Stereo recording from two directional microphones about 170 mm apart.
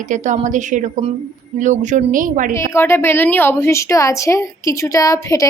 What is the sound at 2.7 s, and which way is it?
A woman's voice, 15° left (ahead or behind).